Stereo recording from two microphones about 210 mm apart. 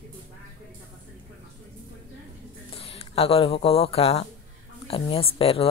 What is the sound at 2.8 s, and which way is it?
A woman's voice, 30° left (ahead or behind).